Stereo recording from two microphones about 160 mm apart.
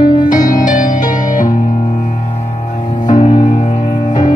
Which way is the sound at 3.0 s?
50° left (ahead or behind).